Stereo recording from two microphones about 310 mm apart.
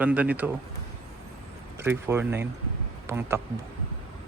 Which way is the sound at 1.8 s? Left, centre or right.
Centre.